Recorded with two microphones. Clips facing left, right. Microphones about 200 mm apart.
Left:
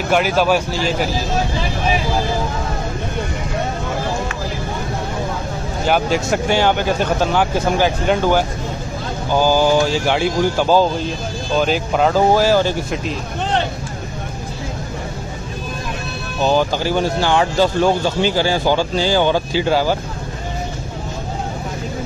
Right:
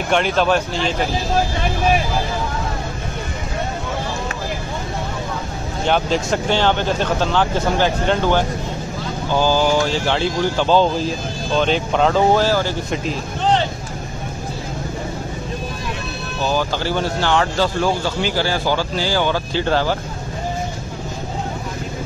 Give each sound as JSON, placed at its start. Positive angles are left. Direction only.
{"t": 0.1, "sound": "speech", "side_deg": 5}
{"t": 5.9, "sound": "speech", "side_deg": 10}
{"t": 16.4, "sound": "speech", "side_deg": 15}